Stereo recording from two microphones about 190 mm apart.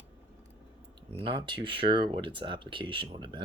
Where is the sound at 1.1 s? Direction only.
25° right (ahead or behind).